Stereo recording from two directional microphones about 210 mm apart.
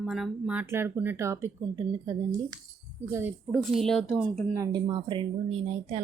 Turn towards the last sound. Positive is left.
turn(degrees=-30)  # may be behind; listen again after turning